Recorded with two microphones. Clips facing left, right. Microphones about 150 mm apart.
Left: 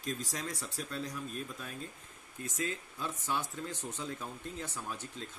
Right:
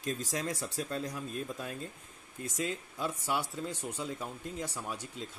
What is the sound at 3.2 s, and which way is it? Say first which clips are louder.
Speech: even; 10° right (ahead or behind).